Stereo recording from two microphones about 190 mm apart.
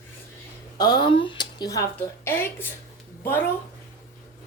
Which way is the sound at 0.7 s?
25° left (ahead or behind).